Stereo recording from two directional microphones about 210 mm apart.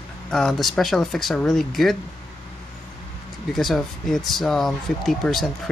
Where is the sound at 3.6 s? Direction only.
Centre (ahead or behind).